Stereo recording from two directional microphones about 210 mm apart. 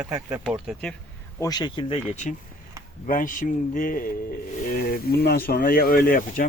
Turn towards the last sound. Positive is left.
turn(degrees=45)  # may be behind; listen again after turning